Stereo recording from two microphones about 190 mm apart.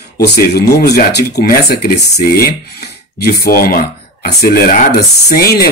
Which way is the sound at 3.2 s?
50° left (ahead or behind).